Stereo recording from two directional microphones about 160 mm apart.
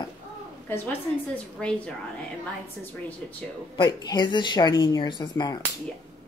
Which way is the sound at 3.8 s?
25° left (ahead or behind).